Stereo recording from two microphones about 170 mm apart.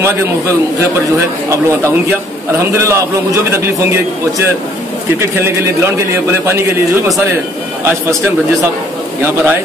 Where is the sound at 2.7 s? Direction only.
15° right (ahead or behind).